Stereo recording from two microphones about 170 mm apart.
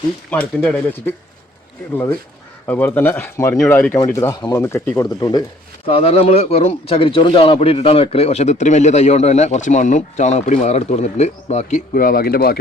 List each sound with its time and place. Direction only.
0.3 s speech: 10° left (ahead or behind)
2.6 s speech: 10° left (ahead or behind)
5.9 s speech: 35° left (ahead or behind)
11.9 s speech: 60° left (ahead or behind)